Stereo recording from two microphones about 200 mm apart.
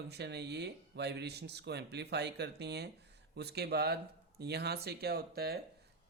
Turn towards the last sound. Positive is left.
turn(degrees=-50)  # may be behind; listen again after turning